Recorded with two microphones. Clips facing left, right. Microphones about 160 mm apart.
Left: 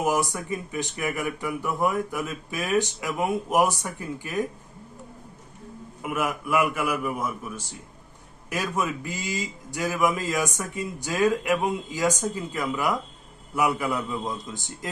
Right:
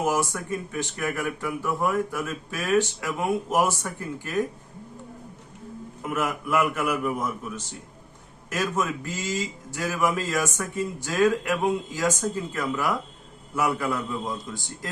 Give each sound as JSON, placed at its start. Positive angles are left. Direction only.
{"t": 0.0, "sound": "speech", "side_deg": 15}
{"t": 6.0, "sound": "speech", "side_deg": 10}